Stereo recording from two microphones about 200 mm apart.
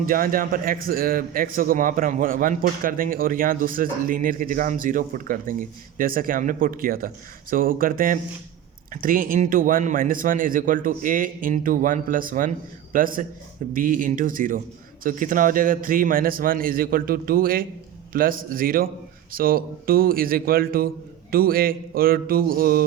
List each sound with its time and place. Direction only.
0.0 s a man's voice: 45° right (ahead or behind)